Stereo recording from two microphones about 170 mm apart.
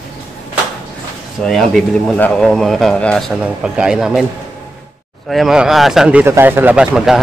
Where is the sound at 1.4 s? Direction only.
Centre (ahead or behind).